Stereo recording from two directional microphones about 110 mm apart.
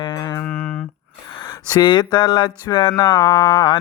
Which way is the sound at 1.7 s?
40° left (ahead or behind).